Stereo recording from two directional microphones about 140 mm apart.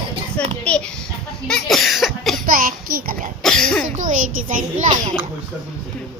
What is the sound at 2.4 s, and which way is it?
Speech, 85° right.